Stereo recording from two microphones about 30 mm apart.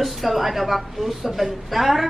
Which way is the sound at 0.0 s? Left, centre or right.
Centre.